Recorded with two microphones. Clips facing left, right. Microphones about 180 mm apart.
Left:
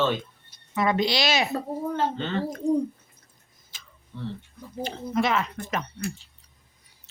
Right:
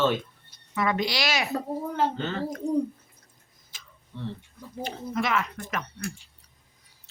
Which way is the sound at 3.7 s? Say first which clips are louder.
Even; 30° left (ahead or behind).